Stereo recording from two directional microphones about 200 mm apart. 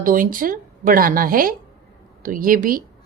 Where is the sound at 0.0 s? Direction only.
45° right (ahead or behind).